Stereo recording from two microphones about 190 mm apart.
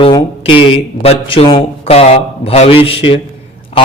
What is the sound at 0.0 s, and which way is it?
Speech, 25° left (ahead or behind).